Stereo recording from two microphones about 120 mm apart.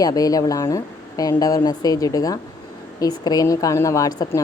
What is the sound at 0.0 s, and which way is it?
A woman's voice, 30° left (ahead or behind).